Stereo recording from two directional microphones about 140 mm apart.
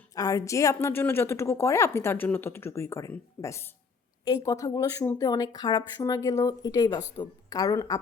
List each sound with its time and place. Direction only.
0.1 s speech: 25° left (ahead or behind)